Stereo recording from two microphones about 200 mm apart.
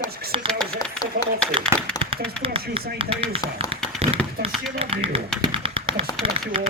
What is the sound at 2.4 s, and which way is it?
Speech, 25° right (ahead or behind).